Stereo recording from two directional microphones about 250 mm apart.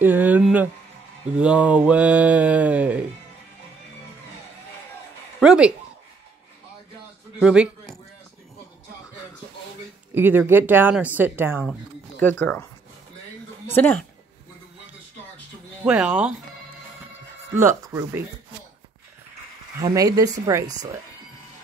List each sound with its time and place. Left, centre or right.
0.0 s speech: centre
1.2 s mantra: centre
5.4 s a man's voice: centre
7.3 s a sound: centre
10.1 s speech: centre
12.2 s speech: centre
13.7 s speech: centre
15.8 s mantra: centre
17.6 s speech: centre
19.8 s speech: centre